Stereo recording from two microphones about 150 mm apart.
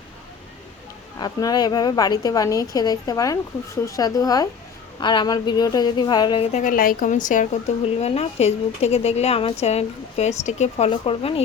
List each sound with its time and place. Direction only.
1.2 s a woman's voice: 25° left (ahead or behind)
6.4 s a woman's voice: 55° left (ahead or behind)
7.9 s speech: 40° left (ahead or behind)